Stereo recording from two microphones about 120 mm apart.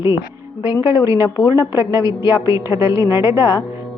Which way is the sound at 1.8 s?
25° right (ahead or behind).